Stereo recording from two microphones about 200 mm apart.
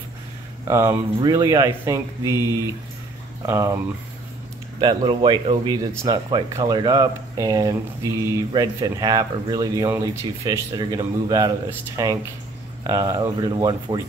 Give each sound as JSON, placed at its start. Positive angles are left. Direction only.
{"t": 0.7, "sound": "speech", "side_deg": -15}
{"t": 3.4, "sound": "speech", "side_deg": -15}